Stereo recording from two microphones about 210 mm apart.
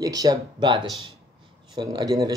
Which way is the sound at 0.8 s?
Centre (ahead or behind).